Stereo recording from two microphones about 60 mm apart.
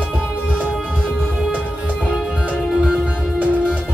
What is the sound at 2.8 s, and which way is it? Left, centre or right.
Music, right.